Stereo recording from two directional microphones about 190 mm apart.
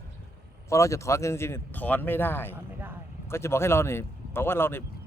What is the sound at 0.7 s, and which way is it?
Speech, 15° left (ahead or behind).